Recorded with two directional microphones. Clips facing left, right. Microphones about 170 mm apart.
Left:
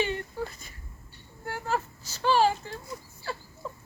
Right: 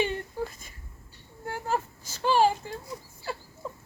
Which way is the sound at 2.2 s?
15° right (ahead or behind).